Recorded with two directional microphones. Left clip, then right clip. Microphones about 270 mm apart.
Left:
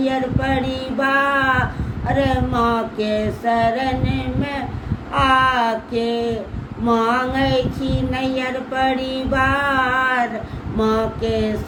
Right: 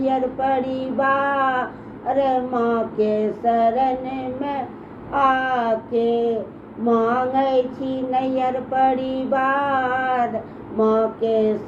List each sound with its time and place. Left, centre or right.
0.0 s speech: centre